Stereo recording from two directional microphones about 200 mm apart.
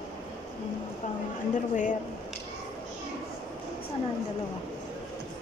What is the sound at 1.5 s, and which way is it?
Speech, 40° left (ahead or behind).